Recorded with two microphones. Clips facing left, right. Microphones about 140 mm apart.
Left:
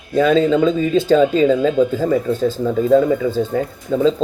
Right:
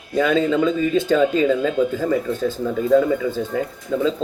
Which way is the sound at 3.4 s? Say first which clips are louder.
Left 4 dB; 25° left (ahead or behind).